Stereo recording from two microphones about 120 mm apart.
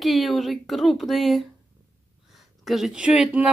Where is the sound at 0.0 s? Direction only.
Centre (ahead or behind).